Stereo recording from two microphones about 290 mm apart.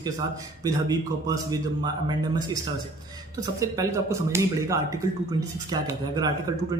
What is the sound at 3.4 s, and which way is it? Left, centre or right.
A man's voice, centre.